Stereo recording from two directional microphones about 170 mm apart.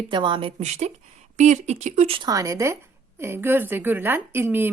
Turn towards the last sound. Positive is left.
turn(degrees=-10)  # may be behind; listen again after turning